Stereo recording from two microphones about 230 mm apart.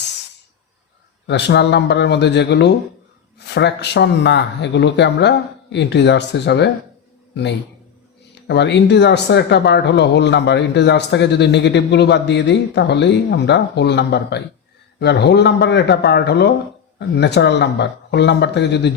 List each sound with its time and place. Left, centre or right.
1.3 s speech: left
8.4 s speech: left